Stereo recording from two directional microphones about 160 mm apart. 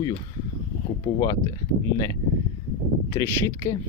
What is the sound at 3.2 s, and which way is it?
Speech, 20° left (ahead or behind).